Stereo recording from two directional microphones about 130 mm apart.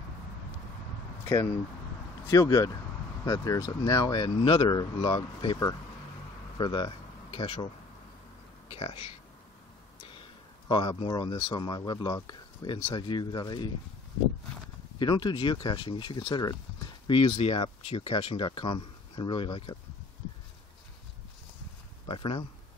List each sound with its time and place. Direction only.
1.2 s a sound: 20° left (ahead or behind)
2.2 s speech: 25° left (ahead or behind); by 7.6 s 40° left (ahead or behind)
8.6 s speech: 45° left (ahead or behind)
10.7 s speech: 35° left (ahead or behind)
15.0 s speech: 35° left (ahead or behind)
22.0 s speech: 40° left (ahead or behind)